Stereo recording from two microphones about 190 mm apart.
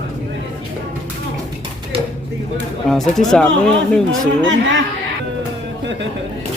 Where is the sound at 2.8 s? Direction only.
Centre (ahead or behind).